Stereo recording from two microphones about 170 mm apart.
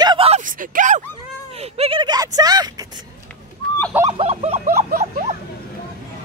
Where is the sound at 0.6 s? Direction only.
50° right (ahead or behind).